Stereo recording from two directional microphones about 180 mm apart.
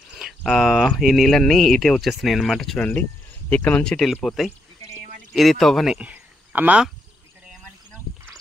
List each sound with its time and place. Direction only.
0.1 s speech: centre (ahead or behind)
4.8 s a sound: 50° right (ahead or behind)
5.3 s speech: centre (ahead or behind)